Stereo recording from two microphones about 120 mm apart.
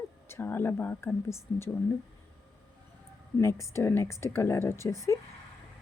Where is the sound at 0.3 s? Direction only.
20° left (ahead or behind).